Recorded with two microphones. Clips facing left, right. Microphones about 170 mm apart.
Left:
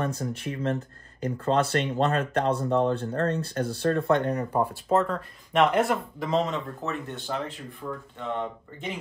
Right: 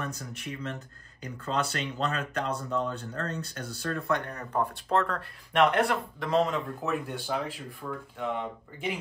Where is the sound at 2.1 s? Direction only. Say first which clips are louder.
Left 6 dB; 40° left (ahead or behind).